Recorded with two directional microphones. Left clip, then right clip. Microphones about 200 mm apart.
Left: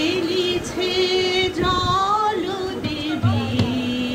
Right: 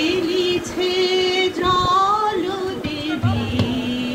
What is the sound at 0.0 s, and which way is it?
Music, 40° left (ahead or behind).